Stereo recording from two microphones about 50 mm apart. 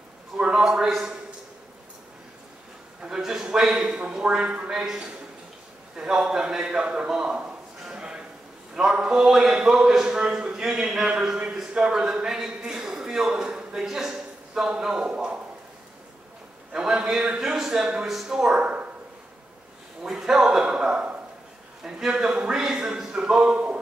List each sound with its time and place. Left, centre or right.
0.4 s a man's voice: centre
3.0 s a man's voice: centre
7.8 s a sound: centre
8.7 s a man's voice: centre
9.2 s a man's voice: centre
16.7 s a man's voice: centre
18.6 s a sound: right
20.0 s a man's voice: centre